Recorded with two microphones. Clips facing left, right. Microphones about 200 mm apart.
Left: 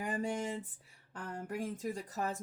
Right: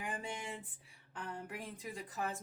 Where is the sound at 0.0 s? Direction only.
40° left (ahead or behind).